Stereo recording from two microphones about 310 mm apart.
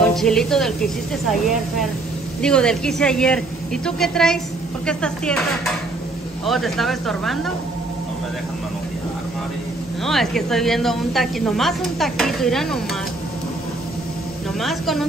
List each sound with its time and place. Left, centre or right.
0.0 s speech: centre
6.4 s speech: centre
10.0 s speech: centre
14.6 s speech: centre